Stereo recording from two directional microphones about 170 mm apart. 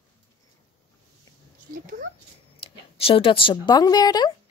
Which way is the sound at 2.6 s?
30° left (ahead or behind).